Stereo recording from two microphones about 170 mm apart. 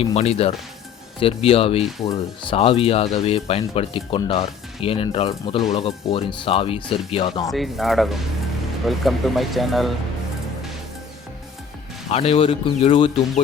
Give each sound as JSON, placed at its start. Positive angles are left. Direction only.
{"t": 0.0, "sound": "speech", "side_deg": 35}
{"t": 7.5, "sound": "speech", "side_deg": 0}
{"t": 12.1, "sound": "speech", "side_deg": 35}